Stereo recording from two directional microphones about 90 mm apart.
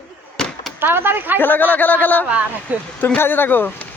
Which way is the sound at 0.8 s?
25° right (ahead or behind).